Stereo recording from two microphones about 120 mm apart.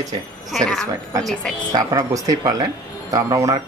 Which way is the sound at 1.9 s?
30° right (ahead or behind).